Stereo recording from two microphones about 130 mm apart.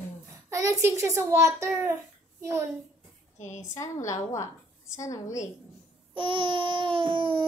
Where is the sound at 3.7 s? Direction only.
25° left (ahead or behind).